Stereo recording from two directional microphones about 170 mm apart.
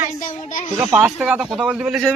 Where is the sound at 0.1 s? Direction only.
45° left (ahead or behind).